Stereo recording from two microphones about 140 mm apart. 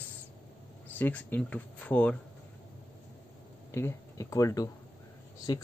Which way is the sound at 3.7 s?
20° left (ahead or behind).